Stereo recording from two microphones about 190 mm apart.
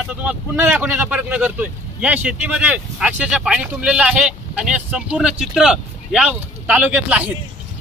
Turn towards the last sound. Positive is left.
turn(degrees=-5)  # may be behind; listen again after turning